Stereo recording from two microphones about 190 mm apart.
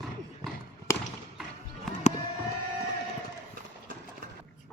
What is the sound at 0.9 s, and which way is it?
Basketball bounce, 15° left (ahead or behind).